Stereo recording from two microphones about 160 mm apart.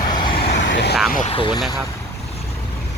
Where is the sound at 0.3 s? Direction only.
85° left.